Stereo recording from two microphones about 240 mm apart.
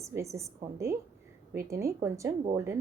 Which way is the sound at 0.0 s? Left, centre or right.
Centre.